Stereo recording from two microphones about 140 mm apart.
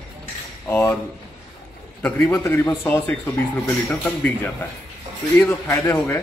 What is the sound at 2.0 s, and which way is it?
A man's voice, 10° left (ahead or behind).